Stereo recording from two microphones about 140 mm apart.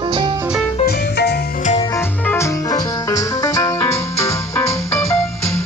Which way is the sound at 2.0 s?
20° left (ahead or behind).